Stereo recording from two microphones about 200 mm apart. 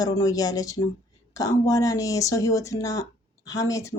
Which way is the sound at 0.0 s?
20° left (ahead or behind).